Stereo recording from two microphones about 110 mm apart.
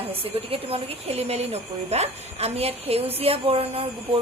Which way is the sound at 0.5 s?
60° right (ahead or behind).